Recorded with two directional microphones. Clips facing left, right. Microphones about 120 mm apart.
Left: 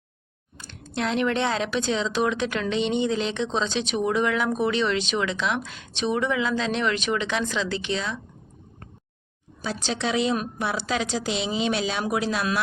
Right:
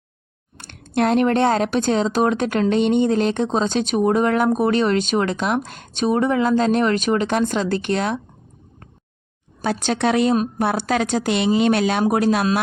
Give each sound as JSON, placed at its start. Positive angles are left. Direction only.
{"t": 0.5, "sound": "speech", "side_deg": -65}
{"t": 9.6, "sound": "speech", "side_deg": -60}